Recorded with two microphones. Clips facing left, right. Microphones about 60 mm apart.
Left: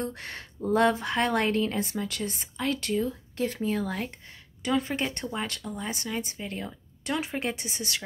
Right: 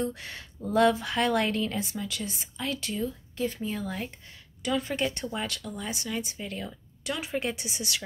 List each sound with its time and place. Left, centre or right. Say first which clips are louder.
0.0 s speech: right 2 dB; left
3.4 s speech: left 3 dB; left
4.6 s speech: left 1 dB; left